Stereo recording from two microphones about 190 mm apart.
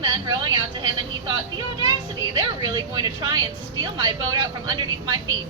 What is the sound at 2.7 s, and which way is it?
Speech, 20° right (ahead or behind).